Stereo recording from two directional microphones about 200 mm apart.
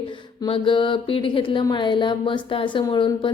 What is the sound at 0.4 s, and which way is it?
A woman's voice, 25° left (ahead or behind).